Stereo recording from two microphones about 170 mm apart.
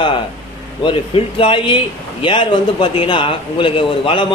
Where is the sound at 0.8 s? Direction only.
30° left (ahead or behind).